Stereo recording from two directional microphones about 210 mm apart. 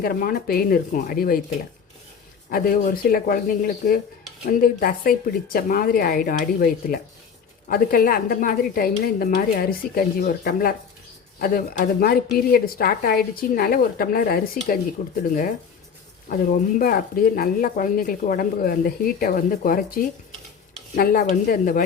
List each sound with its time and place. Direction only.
0.0 s speech: 45° left (ahead or behind)
2.5 s speech: 45° left (ahead or behind)